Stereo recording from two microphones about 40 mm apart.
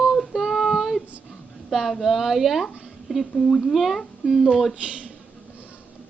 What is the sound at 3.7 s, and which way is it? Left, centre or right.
Speech, centre.